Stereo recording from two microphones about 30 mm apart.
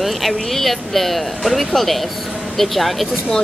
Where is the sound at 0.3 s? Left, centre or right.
Centre.